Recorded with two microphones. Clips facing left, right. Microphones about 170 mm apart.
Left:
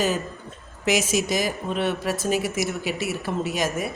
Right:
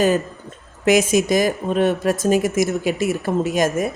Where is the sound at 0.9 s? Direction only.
55° right (ahead or behind).